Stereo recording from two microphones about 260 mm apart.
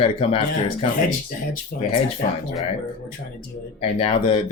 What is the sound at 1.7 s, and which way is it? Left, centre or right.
Speech, left.